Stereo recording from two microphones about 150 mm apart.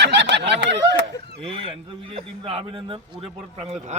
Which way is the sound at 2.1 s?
40° right (ahead or behind).